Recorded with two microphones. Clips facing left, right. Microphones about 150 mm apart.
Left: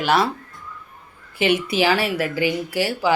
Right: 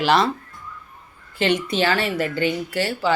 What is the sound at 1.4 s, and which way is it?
Speech, 10° left (ahead or behind).